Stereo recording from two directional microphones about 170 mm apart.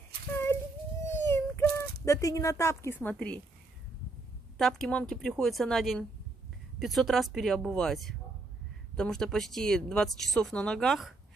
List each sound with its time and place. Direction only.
1.1 s a sound: 15° left (ahead or behind)
2.0 s a woman's voice: 20° left (ahead or behind)
4.6 s speech: centre (ahead or behind)